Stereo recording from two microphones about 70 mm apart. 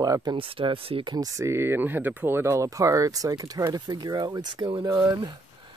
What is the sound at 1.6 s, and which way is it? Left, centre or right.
Speech, right.